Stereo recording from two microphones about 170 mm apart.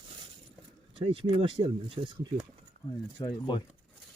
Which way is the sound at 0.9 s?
30° right (ahead or behind).